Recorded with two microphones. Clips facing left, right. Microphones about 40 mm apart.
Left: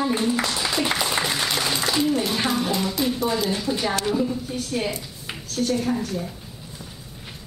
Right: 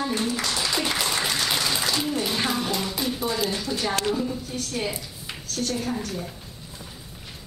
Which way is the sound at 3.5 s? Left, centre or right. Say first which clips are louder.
Left 2 dB; centre.